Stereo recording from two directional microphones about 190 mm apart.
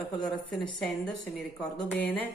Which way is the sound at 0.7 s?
5° left (ahead or behind).